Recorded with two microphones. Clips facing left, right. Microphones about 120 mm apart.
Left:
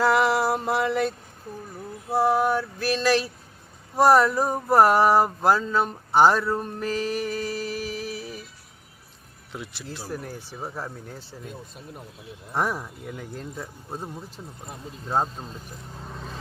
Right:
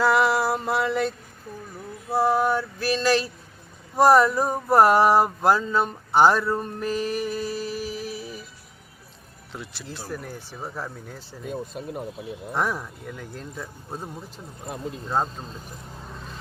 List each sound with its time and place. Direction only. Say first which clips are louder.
0.0 s mantra: even; 15° left (ahead or behind)
2.1 s speech: even; 5° left (ahead or behind)
3.9 s a sound: right 1 dB; centre (ahead or behind)
9.5 s speech: left 1 dB; 10° left (ahead or behind)
11.7 s speech: right 9 dB; 90° right
12.5 s a sound: left 1 dB; 5° left (ahead or behind)
15.1 s speech: left 1 dB; 10° left (ahead or behind)